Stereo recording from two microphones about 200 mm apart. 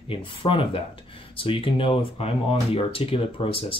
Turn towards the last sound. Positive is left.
turn(degrees=30)  # may be behind; listen again after turning